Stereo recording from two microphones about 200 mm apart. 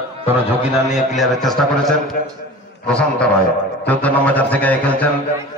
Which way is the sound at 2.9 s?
5° left (ahead or behind).